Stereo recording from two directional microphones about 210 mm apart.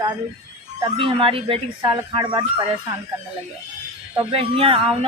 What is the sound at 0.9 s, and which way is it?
Speech, 25° right (ahead or behind).